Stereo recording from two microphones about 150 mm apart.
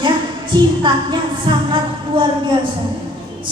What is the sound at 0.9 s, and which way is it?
Speech, 30° right (ahead or behind).